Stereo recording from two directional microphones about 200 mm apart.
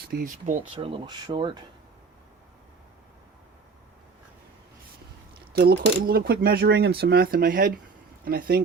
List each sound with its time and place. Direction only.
0.1 s speech: 45° right (ahead or behind)
0.7 s speech: 25° right (ahead or behind)
5.5 s speech: 50° right (ahead or behind)